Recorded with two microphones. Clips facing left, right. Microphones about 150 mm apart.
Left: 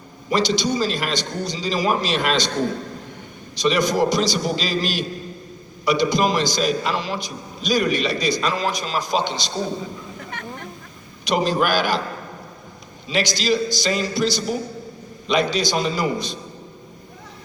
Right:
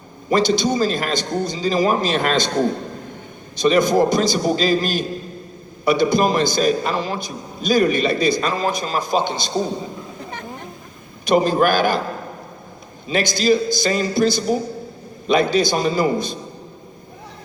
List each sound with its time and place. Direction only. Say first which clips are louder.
0.3 s a man's voice: right 3 dB; 50° right (ahead or behind)
3.5 s a man's voice: right 4 dB; 50° right (ahead or behind)
11.3 s a man's voice: right 4 dB; 50° right (ahead or behind)
13.1 s a man's voice: right 4 dB; 50° right (ahead or behind)